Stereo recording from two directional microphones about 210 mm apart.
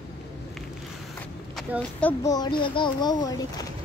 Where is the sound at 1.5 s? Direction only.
5° left (ahead or behind).